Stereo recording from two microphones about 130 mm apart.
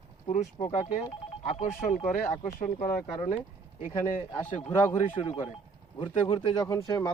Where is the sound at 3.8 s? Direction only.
80° left.